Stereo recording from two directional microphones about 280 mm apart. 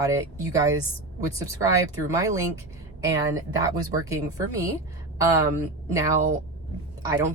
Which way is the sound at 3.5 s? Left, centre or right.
Centre.